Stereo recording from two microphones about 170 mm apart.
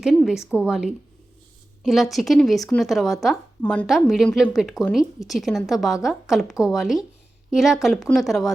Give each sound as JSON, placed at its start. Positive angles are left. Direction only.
{"t": 0.0, "sound": "speech", "side_deg": 0}